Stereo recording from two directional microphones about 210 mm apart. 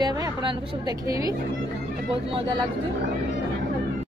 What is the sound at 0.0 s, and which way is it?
A woman's voice, 20° right (ahead or behind).